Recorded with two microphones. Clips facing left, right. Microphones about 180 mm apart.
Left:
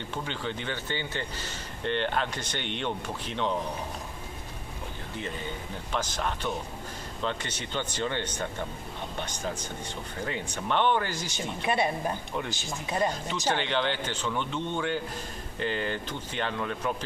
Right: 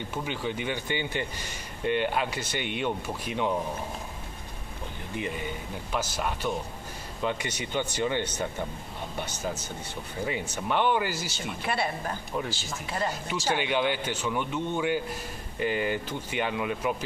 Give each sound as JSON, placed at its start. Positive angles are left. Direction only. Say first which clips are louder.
{"t": 0.1, "sound": "speech", "louder": "right 2 dB", "side_deg": -10}
{"t": 5.9, "sound": "speech", "louder": "right 1 dB", "side_deg": -10}
{"t": 11.3, "sound": "a woman's voice", "louder": "left 7 dB", "side_deg": 20}
{"t": 13.5, "sound": "speech", "louder": "right 1 dB", "side_deg": -10}